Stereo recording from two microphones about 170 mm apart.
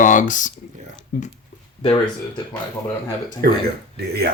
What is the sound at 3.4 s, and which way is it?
Speech, 65° right (ahead or behind).